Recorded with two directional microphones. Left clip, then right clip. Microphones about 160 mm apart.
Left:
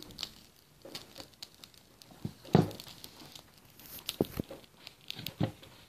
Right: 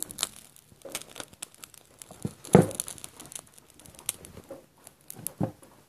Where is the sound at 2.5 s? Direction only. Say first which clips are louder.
Right 8 dB; 20° right (ahead or behind).